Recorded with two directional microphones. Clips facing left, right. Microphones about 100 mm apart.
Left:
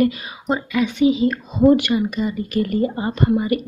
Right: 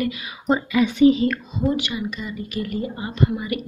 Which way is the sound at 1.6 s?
55° left (ahead or behind).